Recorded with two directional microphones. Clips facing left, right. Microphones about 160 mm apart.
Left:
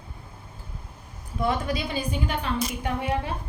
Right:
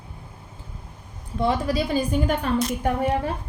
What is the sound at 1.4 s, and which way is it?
A woman's voice, 35° right (ahead or behind).